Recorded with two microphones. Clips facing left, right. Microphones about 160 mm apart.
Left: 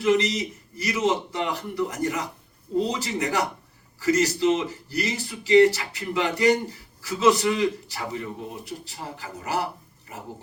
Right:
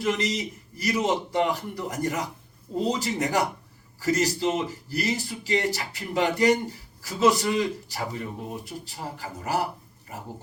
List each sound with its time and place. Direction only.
0.0 s a man's voice: 40° right (ahead or behind)